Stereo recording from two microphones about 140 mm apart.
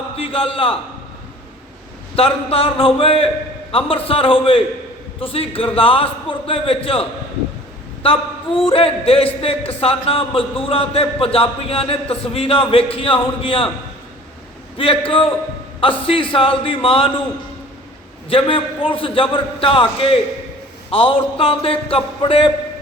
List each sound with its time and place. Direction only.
0.2 s a man's voice: 40° left (ahead or behind)
2.1 s a man's voice: 45° left (ahead or behind)
14.8 s a man's voice: 40° left (ahead or behind)
18.3 s a man's voice: 40° left (ahead or behind)